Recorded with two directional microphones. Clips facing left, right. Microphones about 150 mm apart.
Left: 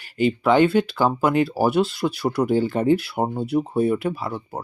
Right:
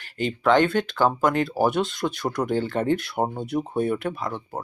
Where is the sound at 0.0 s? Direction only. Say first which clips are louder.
Left 4 dB; 10° left (ahead or behind).